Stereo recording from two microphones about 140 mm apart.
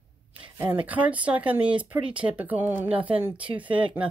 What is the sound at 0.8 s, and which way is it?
Speech, 10° right (ahead or behind).